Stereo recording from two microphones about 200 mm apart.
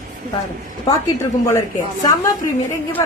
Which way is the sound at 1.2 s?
15° left (ahead or behind).